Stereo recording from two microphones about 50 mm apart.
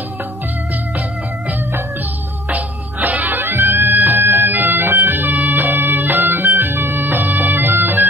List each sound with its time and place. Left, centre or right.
2.5 s music: right
3.3 s bagpipes: right
6.0 s music: right
6.9 s bagpipes: right